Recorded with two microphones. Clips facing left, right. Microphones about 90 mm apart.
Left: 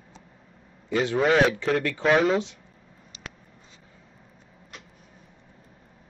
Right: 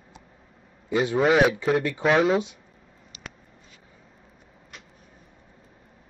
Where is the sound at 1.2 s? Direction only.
5° right (ahead or behind).